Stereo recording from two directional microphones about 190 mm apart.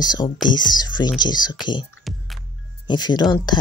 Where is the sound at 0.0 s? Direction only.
20° left (ahead or behind).